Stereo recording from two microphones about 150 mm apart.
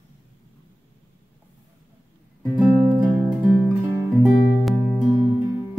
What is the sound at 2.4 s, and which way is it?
Music, 10° right (ahead or behind).